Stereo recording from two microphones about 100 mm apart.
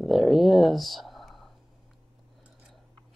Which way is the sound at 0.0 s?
Centre (ahead or behind).